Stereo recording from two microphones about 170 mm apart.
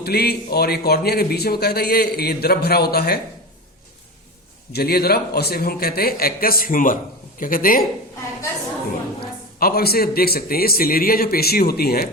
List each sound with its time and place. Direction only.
0.0 s speech: 65° left (ahead or behind)
4.7 s a man's voice: 65° left (ahead or behind)
9.2 s a man's voice: 65° left (ahead or behind)